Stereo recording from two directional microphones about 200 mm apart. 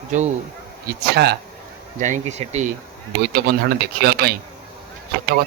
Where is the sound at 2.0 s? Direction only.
35° right (ahead or behind).